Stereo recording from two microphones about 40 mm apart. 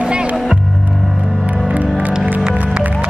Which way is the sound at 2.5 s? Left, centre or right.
Right.